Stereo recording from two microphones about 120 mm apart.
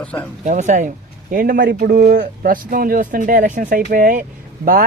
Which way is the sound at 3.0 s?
90° right.